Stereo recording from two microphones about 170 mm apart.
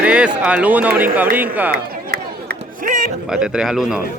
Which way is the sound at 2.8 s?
50° right (ahead or behind).